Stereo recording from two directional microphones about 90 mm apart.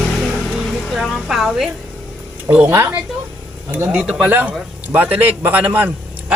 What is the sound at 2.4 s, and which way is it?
A man's voice, 20° right (ahead or behind).